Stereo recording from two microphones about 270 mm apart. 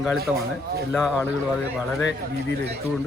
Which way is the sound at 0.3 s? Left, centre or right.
Centre.